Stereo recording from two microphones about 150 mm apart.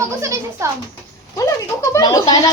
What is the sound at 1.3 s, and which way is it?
Speech, 20° left (ahead or behind).